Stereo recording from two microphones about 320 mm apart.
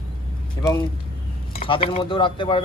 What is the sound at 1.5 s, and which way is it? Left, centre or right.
Speech, centre.